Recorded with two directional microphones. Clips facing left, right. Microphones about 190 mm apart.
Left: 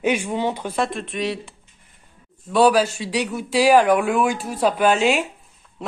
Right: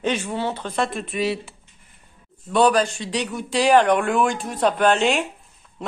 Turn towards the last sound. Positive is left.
turn(degrees=0)  # may be behind; listen again after turning